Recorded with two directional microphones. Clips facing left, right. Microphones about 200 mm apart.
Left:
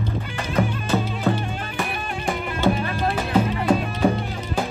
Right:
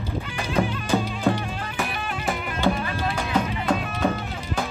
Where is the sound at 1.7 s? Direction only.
Centre (ahead or behind).